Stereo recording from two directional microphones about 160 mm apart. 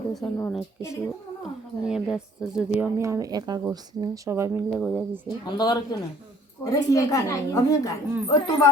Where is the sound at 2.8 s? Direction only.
15° right (ahead or behind).